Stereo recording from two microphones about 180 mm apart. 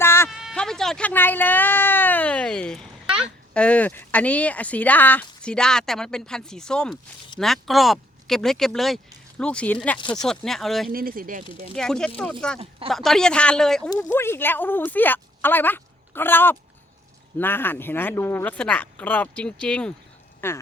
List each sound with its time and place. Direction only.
0.0 s a sound: 15° left (ahead or behind)
0.3 s a sound: centre (ahead or behind)
3.5 s speech: 5° left (ahead or behind)
10.9 s speech: 55° right (ahead or behind)
11.7 s speech: 5° left (ahead or behind)
13.9 s speech: 15° left (ahead or behind)